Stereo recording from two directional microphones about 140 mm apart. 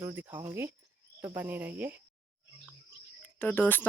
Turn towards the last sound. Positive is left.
turn(degrees=10)  # may be behind; listen again after turning